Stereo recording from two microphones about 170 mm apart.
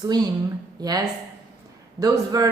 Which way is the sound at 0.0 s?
25° right (ahead or behind).